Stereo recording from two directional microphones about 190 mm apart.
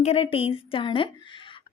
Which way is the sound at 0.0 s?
30° left (ahead or behind).